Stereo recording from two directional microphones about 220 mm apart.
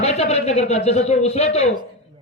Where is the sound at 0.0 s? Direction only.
30° left (ahead or behind).